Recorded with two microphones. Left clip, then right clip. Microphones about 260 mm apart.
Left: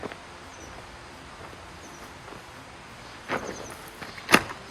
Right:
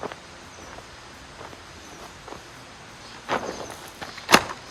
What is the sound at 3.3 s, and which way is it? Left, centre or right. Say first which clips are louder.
Vehicle: right 4 dB; right.